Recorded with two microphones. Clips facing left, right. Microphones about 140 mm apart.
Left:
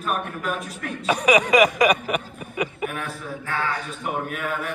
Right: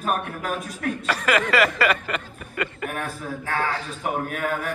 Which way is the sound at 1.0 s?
15° left (ahead or behind).